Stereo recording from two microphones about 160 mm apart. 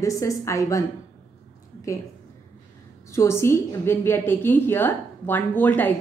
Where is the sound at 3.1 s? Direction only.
15° left (ahead or behind).